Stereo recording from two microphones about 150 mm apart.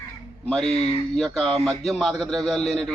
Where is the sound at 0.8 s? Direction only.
45° left (ahead or behind).